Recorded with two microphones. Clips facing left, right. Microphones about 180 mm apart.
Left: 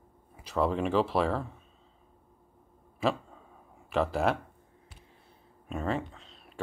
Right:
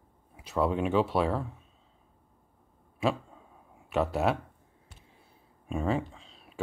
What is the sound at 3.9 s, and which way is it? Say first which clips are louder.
Speech: even; centre (ahead or behind).